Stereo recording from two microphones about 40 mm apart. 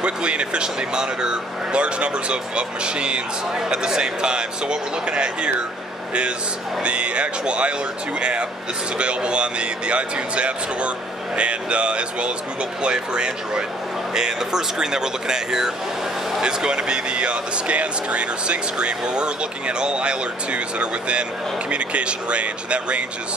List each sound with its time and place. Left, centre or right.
0.0 s speech: right
6.8 s speech: right